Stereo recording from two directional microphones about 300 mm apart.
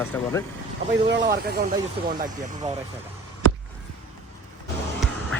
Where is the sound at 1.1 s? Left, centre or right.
Right.